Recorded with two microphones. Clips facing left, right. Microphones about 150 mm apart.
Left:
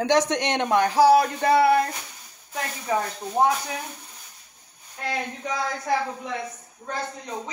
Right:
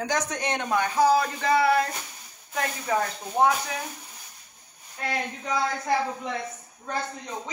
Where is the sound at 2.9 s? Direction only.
20° left (ahead or behind).